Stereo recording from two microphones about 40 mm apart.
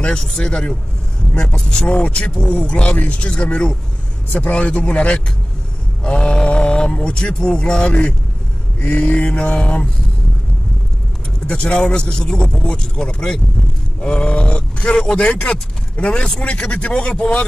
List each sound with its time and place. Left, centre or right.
0.1 s speech: centre
1.9 s speech: left
11.5 s speech: left